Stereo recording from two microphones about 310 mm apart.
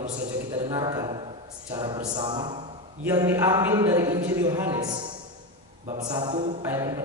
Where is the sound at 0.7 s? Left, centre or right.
Centre.